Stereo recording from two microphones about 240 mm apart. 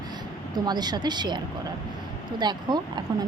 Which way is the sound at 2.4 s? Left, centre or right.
Centre.